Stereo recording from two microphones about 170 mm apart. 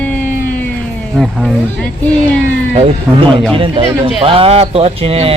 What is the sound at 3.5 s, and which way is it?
Speech, 30° right (ahead or behind).